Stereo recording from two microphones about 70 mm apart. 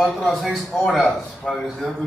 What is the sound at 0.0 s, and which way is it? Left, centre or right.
A man's voice, centre.